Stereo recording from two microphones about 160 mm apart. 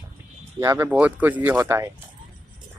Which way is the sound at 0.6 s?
15° right (ahead or behind).